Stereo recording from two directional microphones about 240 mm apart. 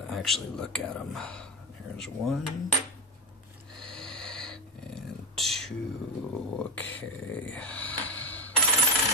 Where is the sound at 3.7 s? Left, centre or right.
Centre.